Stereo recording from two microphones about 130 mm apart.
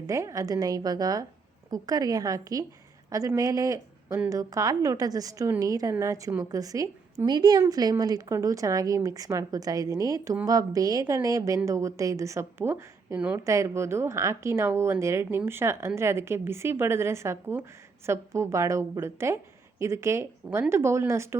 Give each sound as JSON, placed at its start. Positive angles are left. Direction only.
{"t": 0.1, "sound": "a woman's voice", "side_deg": -25}